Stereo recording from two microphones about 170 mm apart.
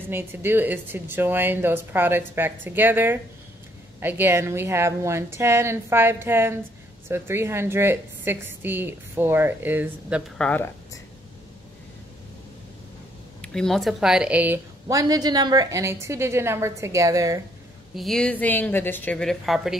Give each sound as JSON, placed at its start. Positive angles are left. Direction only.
{"t": 0.1, "sound": "a woman's voice", "side_deg": -15}
{"t": 10.3, "sound": "speech", "side_deg": 5}
{"t": 13.4, "sound": "a woman's voice", "side_deg": 5}
{"t": 14.9, "sound": "a woman's voice", "side_deg": -20}
{"t": 17.9, "sound": "a woman's voice", "side_deg": 0}